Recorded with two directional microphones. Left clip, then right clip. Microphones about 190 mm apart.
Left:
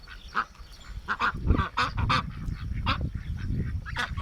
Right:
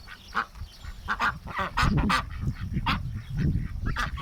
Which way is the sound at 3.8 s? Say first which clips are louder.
Right 1 dB; 25° left (ahead or behind).